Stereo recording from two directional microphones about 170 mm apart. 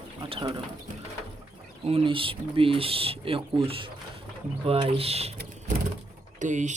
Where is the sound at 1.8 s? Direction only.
35° right (ahead or behind).